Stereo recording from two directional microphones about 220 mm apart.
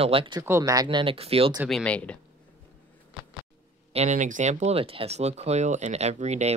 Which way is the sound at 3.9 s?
30° right (ahead or behind).